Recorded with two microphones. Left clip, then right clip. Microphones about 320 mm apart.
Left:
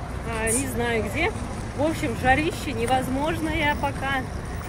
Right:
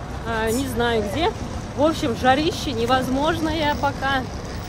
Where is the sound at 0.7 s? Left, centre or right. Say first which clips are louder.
Right 5 dB; centre.